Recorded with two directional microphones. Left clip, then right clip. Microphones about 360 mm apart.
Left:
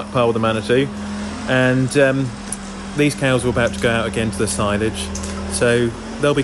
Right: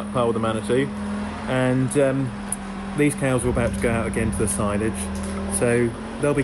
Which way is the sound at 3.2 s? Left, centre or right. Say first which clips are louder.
Left 5 dB; left.